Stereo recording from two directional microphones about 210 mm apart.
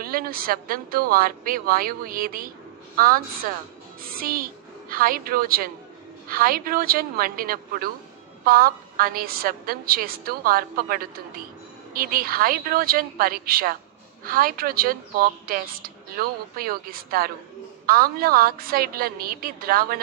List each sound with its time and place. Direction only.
0.0 s a woman's voice: 45° right (ahead or behind)